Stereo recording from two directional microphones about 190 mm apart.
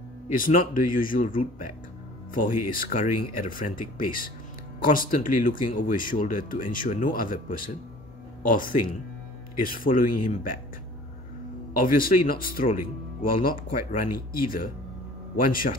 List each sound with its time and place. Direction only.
0.3 s speech: 45° left (ahead or behind)
11.8 s speech: 45° left (ahead or behind)